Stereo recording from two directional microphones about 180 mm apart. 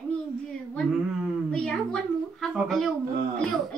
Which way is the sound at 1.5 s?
5° left (ahead or behind).